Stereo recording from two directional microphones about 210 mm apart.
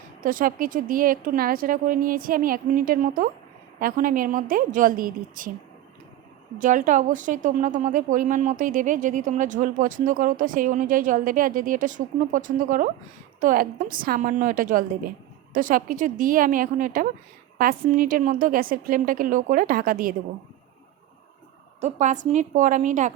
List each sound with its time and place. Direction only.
0.2 s a woman's voice: 40° right (ahead or behind)
6.6 s a woman's voice: 40° right (ahead or behind)
21.8 s a woman's voice: 35° right (ahead or behind)